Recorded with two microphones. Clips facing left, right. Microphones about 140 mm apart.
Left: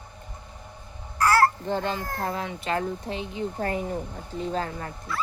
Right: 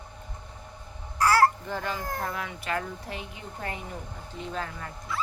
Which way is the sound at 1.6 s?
25° left (ahead or behind).